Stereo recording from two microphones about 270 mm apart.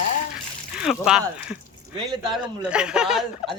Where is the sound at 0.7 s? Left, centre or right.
Centre.